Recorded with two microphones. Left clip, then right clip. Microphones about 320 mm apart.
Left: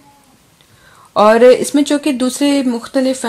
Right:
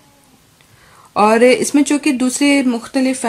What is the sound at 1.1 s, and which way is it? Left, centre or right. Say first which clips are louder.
Speech: left 3 dB; centre.